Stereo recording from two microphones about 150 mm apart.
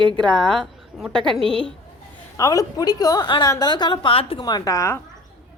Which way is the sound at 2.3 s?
20° left (ahead or behind).